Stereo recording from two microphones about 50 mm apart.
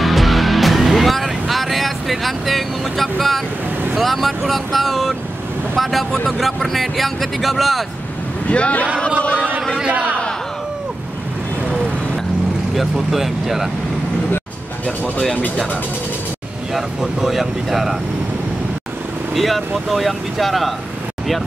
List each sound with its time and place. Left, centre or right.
0.0 s music: centre
3.9 s speech: centre
8.5 s speech: left
9.8 s a man's voice: right
12.7 s speech: centre
16.7 s speech: centre
19.3 s speech: centre